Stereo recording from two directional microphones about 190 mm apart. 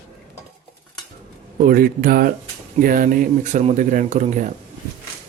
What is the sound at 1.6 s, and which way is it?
Speech, 50° right (ahead or behind).